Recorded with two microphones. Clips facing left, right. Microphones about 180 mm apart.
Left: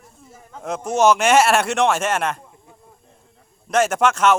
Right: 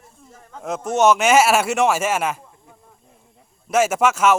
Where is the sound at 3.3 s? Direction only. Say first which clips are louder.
Even; 5° right (ahead or behind).